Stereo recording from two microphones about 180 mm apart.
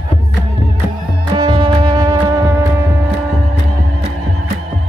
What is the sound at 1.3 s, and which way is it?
Music, 25° right (ahead or behind).